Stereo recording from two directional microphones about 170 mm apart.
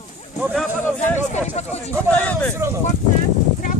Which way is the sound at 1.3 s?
40° left (ahead or behind).